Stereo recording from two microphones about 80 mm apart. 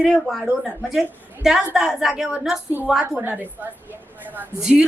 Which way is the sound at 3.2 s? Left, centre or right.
Right.